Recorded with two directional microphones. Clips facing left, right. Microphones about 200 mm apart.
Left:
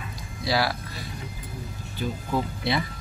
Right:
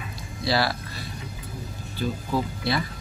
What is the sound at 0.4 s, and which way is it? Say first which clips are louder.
Speech: right 1 dB; 10° left (ahead or behind).